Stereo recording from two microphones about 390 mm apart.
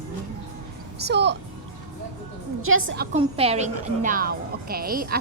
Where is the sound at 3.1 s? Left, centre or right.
Centre.